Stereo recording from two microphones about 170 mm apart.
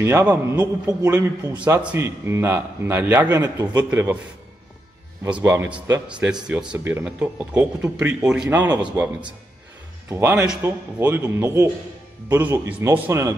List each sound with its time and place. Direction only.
0.0 s a man's voice: 15° right (ahead or behind)
5.3 s a man's voice: 15° right (ahead or behind)